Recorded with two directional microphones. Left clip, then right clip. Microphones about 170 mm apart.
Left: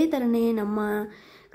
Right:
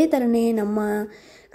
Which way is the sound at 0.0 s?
30° right (ahead or behind).